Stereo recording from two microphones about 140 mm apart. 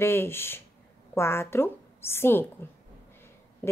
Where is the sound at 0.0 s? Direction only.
15° left (ahead or behind).